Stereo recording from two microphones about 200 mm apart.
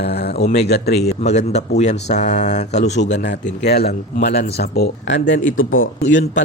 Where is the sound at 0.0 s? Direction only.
55° left (ahead or behind).